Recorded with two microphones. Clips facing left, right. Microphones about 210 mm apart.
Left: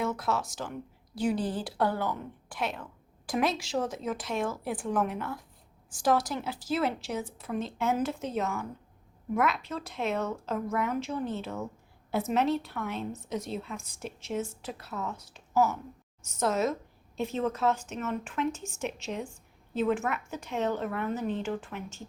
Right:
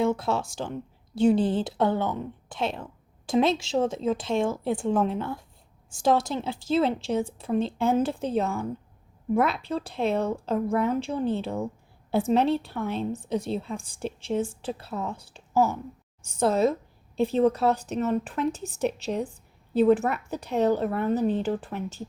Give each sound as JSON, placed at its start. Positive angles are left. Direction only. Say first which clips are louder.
{"t": 0.0, "sound": "a woman's voice", "louder": "right 6 dB", "side_deg": -30}